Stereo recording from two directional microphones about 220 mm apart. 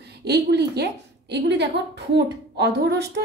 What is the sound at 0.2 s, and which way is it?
A woman's voice, 50° right (ahead or behind).